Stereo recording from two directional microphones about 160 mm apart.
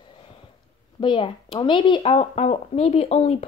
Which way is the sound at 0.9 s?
30° left (ahead or behind).